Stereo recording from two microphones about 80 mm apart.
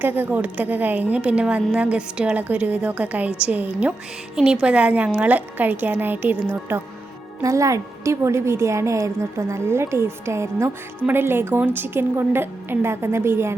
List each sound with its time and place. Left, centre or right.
0.0 s a woman's voice: right
7.4 s a woman's voice: right